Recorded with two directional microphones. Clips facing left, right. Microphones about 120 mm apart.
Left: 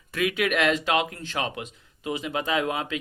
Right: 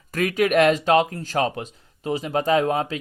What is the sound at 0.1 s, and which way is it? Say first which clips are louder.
Speech: right 5 dB; 40° right (ahead or behind).